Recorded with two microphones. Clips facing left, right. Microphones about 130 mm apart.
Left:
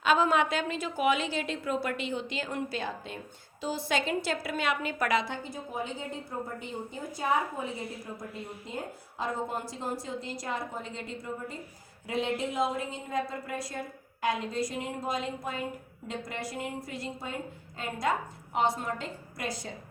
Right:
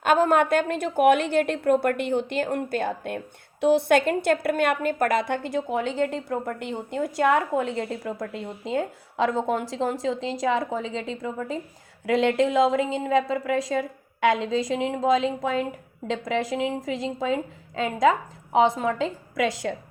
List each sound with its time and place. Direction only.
0.0 s a woman's voice: 50° right (ahead or behind); by 19.7 s 90° right